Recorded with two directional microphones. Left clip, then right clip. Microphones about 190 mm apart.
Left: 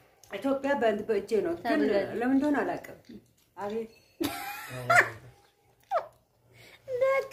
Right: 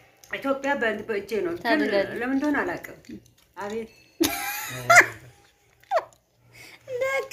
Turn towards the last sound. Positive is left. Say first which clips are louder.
# even
turn(degrees=-45)  # may be behind; listen again after turning